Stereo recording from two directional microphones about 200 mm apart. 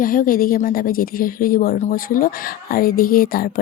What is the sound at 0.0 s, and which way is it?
Speech, 45° left (ahead or behind).